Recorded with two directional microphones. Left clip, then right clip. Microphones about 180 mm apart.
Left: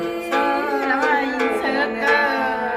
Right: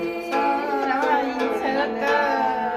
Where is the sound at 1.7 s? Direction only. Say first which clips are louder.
Left 3 dB; 10° right (ahead or behind).